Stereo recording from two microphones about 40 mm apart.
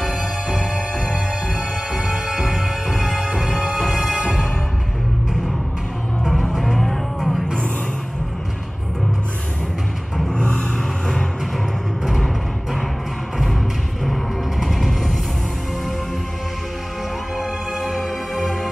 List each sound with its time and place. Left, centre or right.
0.1 s music: right
1.0 s music: centre
6.2 s music: centre
10.3 s vehicle: left
14.0 s music: centre
17.7 s music: centre